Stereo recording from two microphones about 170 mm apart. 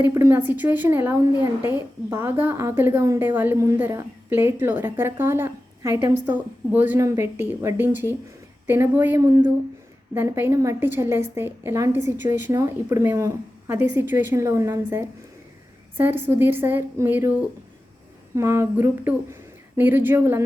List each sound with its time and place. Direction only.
0.0 s a woman's voice: 15° right (ahead or behind)
9.2 s speech: 25° right (ahead or behind)
10.2 s a woman's voice: 15° right (ahead or behind)